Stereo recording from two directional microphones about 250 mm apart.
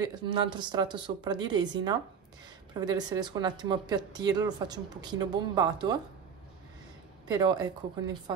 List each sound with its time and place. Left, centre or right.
0.0 s speech: centre
7.2 s speech: centre